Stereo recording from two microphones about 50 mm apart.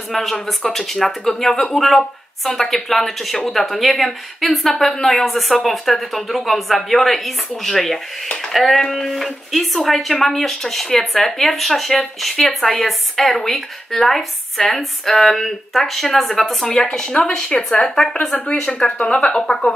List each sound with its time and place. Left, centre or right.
0.1 s a woman's voice: centre
18.5 s a woman's voice: left